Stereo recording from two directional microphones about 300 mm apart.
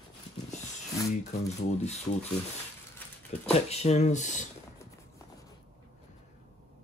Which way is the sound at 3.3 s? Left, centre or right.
Left.